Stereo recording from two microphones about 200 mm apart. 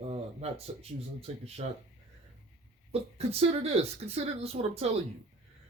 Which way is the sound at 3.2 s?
30° right (ahead or behind).